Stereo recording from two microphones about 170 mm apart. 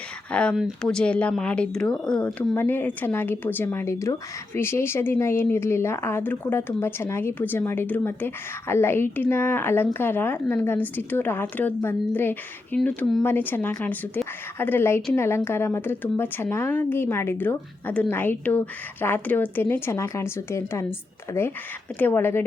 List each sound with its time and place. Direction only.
0.3 s speech: 5° left (ahead or behind)